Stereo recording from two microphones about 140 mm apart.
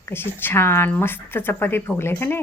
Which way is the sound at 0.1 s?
15° left (ahead or behind).